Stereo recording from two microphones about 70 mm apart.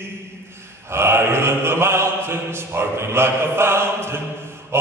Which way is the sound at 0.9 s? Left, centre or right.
Right.